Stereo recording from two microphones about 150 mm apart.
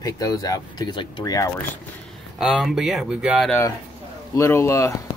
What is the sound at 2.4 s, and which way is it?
Speech, centre (ahead or behind).